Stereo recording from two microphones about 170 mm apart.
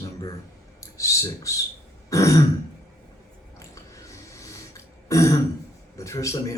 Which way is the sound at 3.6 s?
20° left (ahead or behind).